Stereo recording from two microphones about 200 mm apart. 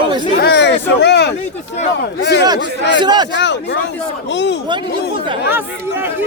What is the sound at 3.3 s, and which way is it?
A man's voice, 60° left (ahead or behind).